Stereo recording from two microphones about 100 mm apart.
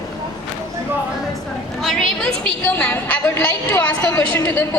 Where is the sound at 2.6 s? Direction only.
20° left (ahead or behind).